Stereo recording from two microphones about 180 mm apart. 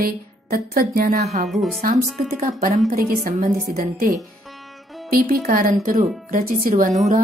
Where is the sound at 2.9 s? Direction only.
50° right (ahead or behind).